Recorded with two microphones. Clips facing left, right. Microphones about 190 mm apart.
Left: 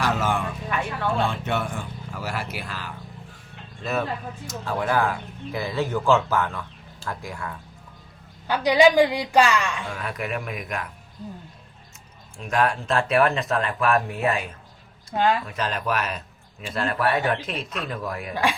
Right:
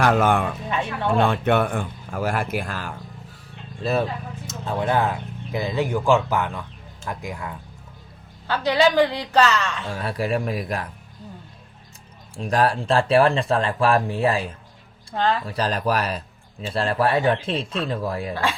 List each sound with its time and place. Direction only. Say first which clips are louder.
0.0 s speech: right 6 dB; 55° right (ahead or behind)
3.8 s speech: right 3 dB; 30° right (ahead or behind); by 7.5 s 15° right (ahead or behind)
8.4 s a woman's voice: left 2 dB; 15° left (ahead or behind)
9.9 s speech: right 5 dB; 30° right (ahead or behind)
12.4 s speech: right 3 dB; 35° right (ahead or behind)
15.1 s a woman's voice: left 1 dB; 10° left (ahead or behind)
15.4 s a man's voice: right 4 dB; 35° right (ahead or behind)